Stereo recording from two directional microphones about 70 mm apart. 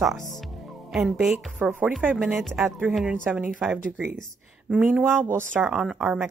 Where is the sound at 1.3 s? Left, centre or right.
Right.